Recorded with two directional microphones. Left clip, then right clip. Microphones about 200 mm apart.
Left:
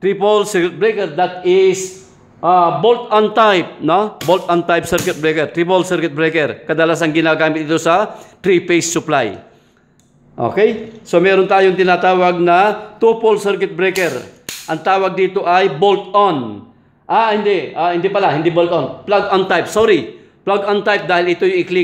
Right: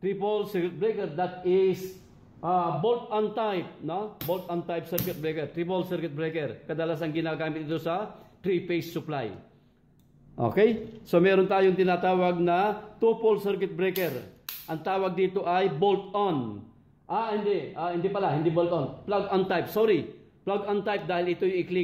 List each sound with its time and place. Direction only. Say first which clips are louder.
0.0 s a man's voice: left 15 dB; 30° left (ahead or behind); by 1.8 s 10° left (ahead or behind)
2.4 s a man's voice: left 15 dB; 30° left (ahead or behind)
10.4 s a man's voice: left 10 dB; 5° right (ahead or behind); by 21.7 s 20° left (ahead or behind)